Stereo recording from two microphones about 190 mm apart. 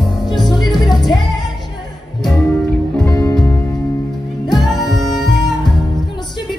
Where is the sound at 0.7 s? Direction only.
20° left (ahead or behind).